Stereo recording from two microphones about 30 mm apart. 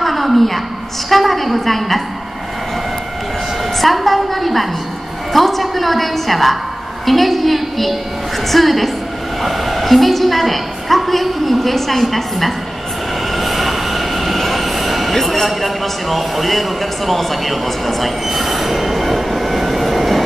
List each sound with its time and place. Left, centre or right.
0.0 s a sound: centre
1.1 s a woman's voice: centre
3.8 s a woman's voice: centre
13.3 s train: centre
15.1 s a man's voice: centre